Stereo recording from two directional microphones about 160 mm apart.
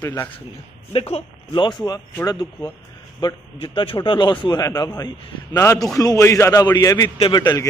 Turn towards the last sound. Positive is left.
turn(degrees=25)  # may be behind; listen again after turning